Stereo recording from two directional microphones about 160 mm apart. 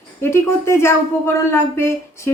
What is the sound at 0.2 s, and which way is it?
Speech, 15° left (ahead or behind).